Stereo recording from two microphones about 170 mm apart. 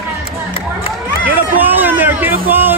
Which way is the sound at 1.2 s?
10° right (ahead or behind).